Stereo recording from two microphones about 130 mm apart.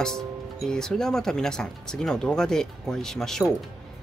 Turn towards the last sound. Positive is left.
turn(degrees=5)  # may be behind; listen again after turning